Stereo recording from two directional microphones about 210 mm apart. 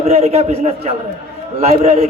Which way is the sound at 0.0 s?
30° right (ahead or behind).